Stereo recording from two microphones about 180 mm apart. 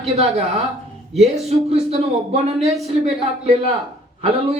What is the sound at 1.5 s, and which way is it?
Speech, 35° right (ahead or behind).